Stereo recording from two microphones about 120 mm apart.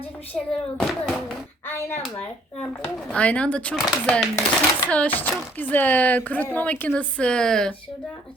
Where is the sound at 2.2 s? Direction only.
10° left (ahead or behind).